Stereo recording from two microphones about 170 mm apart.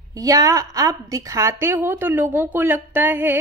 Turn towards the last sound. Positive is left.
turn(degrees=-10)  # may be behind; listen again after turning